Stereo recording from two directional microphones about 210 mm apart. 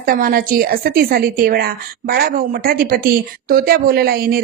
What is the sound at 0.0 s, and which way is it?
A woman's voice, 45° right (ahead or behind).